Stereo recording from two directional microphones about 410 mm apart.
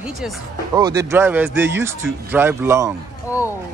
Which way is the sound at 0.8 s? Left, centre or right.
Centre.